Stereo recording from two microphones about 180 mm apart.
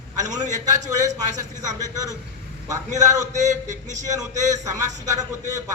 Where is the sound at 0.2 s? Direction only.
40° right (ahead or behind).